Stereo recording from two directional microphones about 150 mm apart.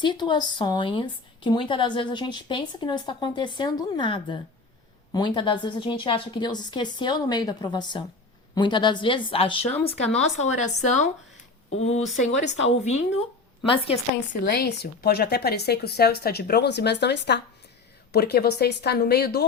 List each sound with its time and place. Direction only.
0.0 s speech: 30° left (ahead or behind)
14.4 s a woman's voice: 90° left